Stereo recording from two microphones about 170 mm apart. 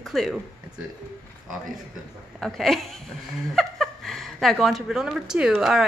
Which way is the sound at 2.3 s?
Centre (ahead or behind).